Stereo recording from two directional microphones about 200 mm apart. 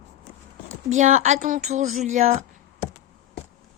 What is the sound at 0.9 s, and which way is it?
A woman's voice, 40° right (ahead or behind).